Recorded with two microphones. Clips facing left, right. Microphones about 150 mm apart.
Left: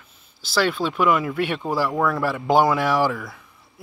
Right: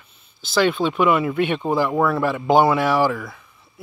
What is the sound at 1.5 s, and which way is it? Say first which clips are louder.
Speech: right 3 dB; 20° right (ahead or behind).